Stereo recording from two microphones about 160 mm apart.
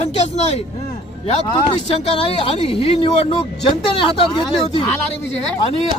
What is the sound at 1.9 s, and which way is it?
A man's voice, 35° left (ahead or behind).